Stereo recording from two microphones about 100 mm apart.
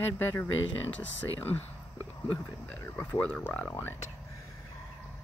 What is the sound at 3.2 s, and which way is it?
Speech, 15° left (ahead or behind).